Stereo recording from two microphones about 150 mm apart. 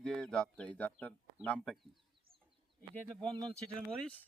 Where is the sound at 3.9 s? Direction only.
5° left (ahead or behind).